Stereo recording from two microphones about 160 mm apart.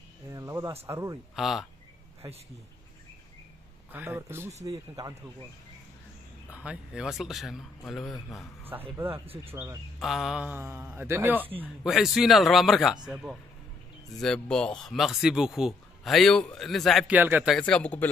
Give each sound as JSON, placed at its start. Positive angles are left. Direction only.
{"t": 0.3, "sound": "speech", "side_deg": -20}
{"t": 1.3, "sound": "speech", "side_deg": 0}
{"t": 3.9, "sound": "a man's voice", "side_deg": -15}
{"t": 6.5, "sound": "speech", "side_deg": -5}
{"t": 8.9, "sound": "a man's voice", "side_deg": -15}
{"t": 9.2, "sound": "speech", "side_deg": -35}
{"t": 9.5, "sound": "a man's voice", "side_deg": -15}
{"t": 9.9, "sound": "a man's voice", "side_deg": 0}
{"t": 11.8, "sound": "speech", "side_deg": 0}
{"t": 17.1, "sound": "a man's voice", "side_deg": -10}
{"t": 17.5, "sound": "speech", "side_deg": 5}